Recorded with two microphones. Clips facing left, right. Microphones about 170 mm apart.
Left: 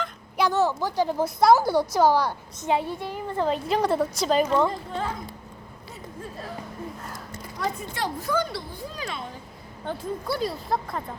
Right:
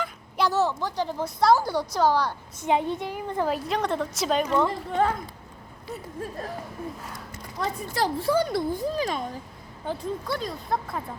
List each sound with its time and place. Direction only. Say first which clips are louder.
0.0 s a sound: left 1 dB; centre (ahead or behind)
0.8 s speech: left 4 dB; 5° left (ahead or behind)
2.6 s a woman's voice: right 1 dB; 20° right (ahead or behind); by 4.7 s centre (ahead or behind)
4.9 s a woman's voice: right 6 dB; 65° right (ahead or behind)
7.9 s speech: right 6 dB; 35° right (ahead or behind)
9.8 s speech: even; centre (ahead or behind)